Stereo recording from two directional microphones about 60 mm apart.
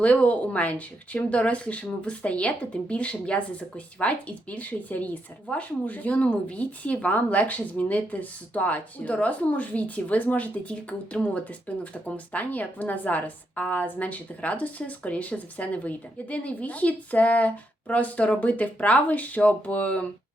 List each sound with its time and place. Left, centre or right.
0.0 s speech: left